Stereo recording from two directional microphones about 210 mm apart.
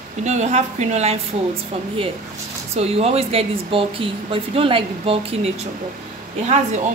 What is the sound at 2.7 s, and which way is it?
Speech, 30° right (ahead or behind).